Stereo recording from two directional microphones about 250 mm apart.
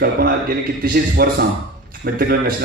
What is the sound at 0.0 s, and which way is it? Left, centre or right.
A man's voice, right.